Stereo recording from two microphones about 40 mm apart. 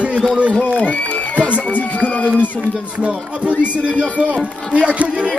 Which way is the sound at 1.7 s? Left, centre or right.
Left.